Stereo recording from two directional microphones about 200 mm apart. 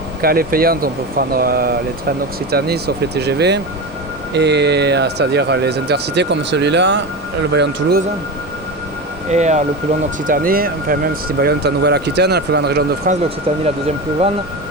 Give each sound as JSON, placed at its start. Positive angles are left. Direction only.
{"t": 0.2, "sound": "speech", "side_deg": -50}
{"t": 9.3, "sound": "speech", "side_deg": -35}
{"t": 13.1, "sound": "speech", "side_deg": -40}